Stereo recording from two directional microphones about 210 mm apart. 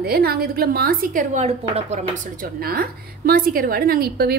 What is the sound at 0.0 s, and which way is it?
A woman's voice, 50° right (ahead or behind).